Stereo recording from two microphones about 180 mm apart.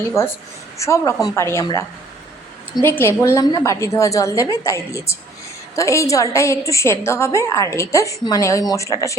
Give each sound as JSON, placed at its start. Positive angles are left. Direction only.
{"t": 0.2, "sound": "a woman's voice", "side_deg": 15}
{"t": 2.8, "sound": "a woman's voice", "side_deg": 10}